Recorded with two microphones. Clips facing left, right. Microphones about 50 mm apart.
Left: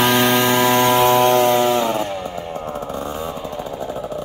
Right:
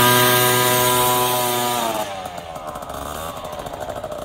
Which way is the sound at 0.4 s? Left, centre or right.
Left.